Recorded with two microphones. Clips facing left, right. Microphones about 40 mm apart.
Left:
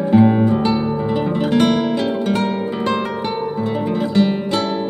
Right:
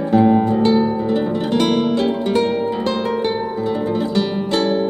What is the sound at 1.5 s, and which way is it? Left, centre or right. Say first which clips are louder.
Music: left 1 dB; centre.